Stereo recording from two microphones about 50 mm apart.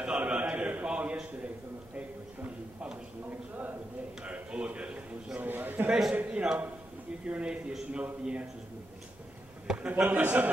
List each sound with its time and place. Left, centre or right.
0.0 s a sound: right
3.3 s a man's voice: right
4.2 s a man's voice: right
5.4 s a man's voice: right
6.1 s a man's voice: right
9.7 s a man's voice: centre
10.0 s a man's voice: right